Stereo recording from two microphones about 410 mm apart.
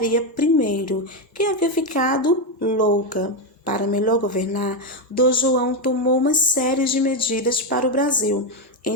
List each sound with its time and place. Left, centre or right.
0.1 s a woman's voice: centre